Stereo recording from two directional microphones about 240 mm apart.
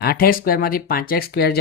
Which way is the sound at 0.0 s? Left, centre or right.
Left.